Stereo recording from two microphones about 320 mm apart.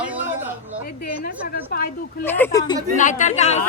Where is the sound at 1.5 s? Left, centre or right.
Left.